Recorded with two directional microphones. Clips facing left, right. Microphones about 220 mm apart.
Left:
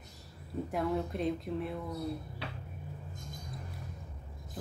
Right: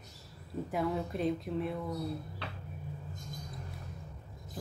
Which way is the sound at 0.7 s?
Centre (ahead or behind).